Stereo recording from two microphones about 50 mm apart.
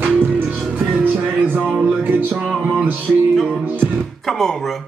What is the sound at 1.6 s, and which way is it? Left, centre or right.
Music, centre.